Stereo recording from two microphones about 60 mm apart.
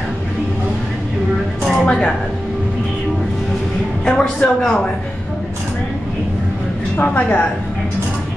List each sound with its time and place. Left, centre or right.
1.6 s a sound: centre
4.0 s speech: centre
4.6 s speech: centre
7.0 s a woman's voice: left